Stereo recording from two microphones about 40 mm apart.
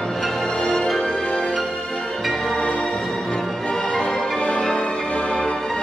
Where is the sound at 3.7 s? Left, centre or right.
Centre.